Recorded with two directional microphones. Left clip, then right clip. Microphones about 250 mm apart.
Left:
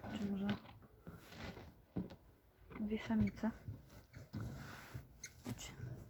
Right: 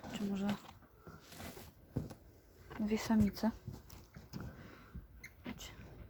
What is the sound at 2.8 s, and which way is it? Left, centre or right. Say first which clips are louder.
Speech: right 5 dB; centre.